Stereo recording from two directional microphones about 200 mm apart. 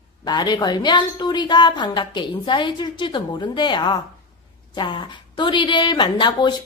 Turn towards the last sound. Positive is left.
turn(degrees=25)  # may be behind; listen again after turning